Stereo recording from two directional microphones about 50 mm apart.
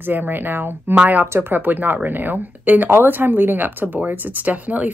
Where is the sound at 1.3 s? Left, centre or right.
Right.